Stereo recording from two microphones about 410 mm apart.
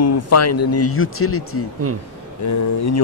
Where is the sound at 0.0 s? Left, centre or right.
Left.